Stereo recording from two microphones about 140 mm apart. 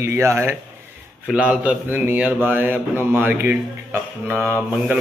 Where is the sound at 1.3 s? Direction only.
5° right (ahead or behind).